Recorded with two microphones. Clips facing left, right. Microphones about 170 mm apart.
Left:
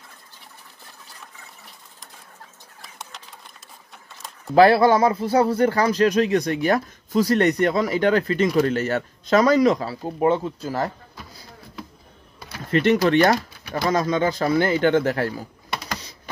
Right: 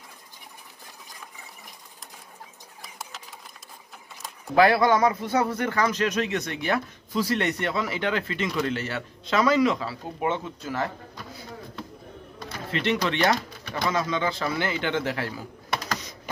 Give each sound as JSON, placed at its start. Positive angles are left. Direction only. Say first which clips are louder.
{"t": 2.8, "sound": "sewing machine", "louder": "even", "side_deg": 0}
{"t": 4.6, "sound": "speech", "louder": "left 5 dB", "side_deg": 35}
{"t": 12.7, "sound": "speech", "louder": "left 9 dB", "side_deg": 45}